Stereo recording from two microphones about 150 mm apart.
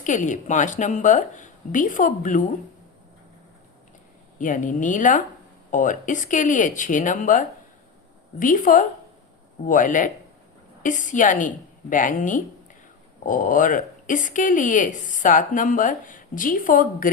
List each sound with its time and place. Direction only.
0.0 s speech: 55° left (ahead or behind)
4.4 s speech: 60° left (ahead or behind)